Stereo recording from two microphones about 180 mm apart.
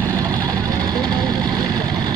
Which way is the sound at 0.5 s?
20° right (ahead or behind).